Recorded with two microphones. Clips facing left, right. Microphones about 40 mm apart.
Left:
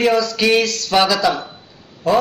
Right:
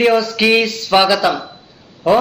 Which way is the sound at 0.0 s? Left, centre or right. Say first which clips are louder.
Right 2 dB; right.